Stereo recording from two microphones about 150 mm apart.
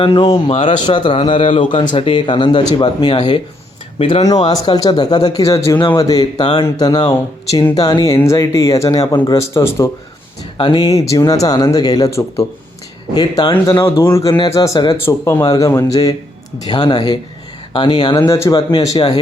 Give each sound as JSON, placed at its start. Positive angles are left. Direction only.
{"t": 0.0, "sound": "a man's voice", "side_deg": 40}
{"t": 10.6, "sound": "speech", "side_deg": 30}
{"t": 13.8, "sound": "a man's voice", "side_deg": 15}